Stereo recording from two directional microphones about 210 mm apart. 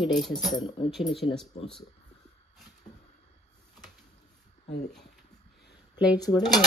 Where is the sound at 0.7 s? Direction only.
25° left (ahead or behind).